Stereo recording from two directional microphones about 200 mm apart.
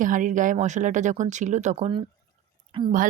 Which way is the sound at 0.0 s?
40° right (ahead or behind).